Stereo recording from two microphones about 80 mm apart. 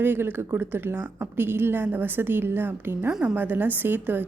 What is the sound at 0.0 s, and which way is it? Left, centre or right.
A woman's voice, right.